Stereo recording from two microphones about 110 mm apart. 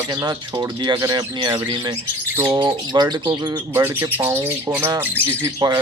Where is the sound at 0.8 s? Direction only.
40° right (ahead or behind).